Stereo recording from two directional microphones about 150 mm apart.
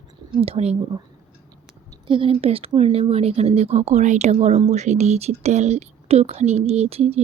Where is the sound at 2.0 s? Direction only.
35° right (ahead or behind).